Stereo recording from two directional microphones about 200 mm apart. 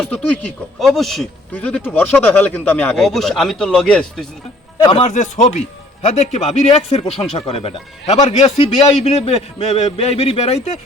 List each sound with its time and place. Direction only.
0.1 s speech: 5° left (ahead or behind)
4.8 s speech: 25° left (ahead or behind)
5.0 s speech: 35° left (ahead or behind)